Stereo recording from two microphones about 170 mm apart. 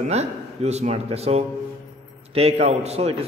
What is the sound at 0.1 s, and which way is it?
A man's voice, 40° right (ahead or behind).